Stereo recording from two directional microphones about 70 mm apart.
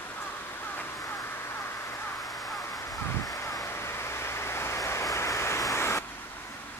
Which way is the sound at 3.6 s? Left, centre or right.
Left.